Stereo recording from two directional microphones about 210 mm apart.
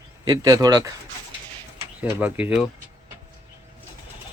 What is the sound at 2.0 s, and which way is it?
Speech, 10° right (ahead or behind).